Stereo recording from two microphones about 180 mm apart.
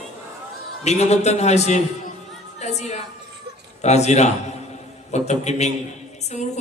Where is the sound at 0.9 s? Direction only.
40° left (ahead or behind).